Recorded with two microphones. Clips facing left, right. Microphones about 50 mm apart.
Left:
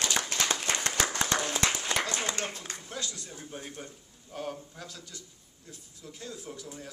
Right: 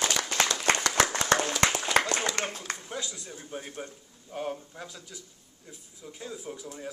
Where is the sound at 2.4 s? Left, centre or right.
Right.